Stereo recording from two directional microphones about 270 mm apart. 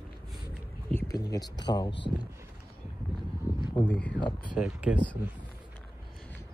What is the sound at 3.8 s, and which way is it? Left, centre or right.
Speech, centre.